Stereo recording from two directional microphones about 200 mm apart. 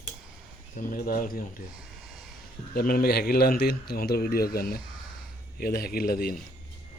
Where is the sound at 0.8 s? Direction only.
45° left (ahead or behind).